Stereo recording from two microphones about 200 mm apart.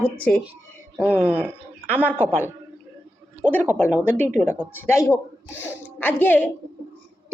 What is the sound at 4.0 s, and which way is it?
A woman's voice, 10° left (ahead or behind).